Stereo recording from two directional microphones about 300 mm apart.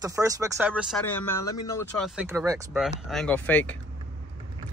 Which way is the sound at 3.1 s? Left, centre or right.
Centre.